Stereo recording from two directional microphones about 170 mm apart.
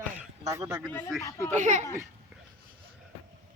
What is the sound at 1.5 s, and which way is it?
Speech, 45° right (ahead or behind).